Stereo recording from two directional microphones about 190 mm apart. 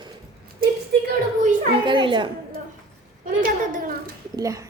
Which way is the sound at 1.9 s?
25° right (ahead or behind).